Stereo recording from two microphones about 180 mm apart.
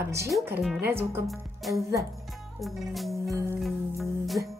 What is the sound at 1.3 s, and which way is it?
Music, centre (ahead or behind).